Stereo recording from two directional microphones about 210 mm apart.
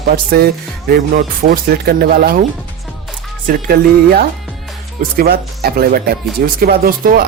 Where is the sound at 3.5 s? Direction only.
45° right (ahead or behind).